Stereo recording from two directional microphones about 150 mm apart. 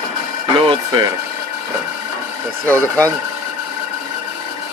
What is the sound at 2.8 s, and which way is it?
Speech, 10° left (ahead or behind).